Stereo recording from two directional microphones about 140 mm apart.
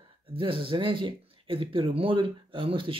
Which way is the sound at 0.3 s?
40° right (ahead or behind).